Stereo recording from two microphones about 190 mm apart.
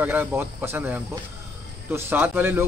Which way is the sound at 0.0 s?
10° right (ahead or behind).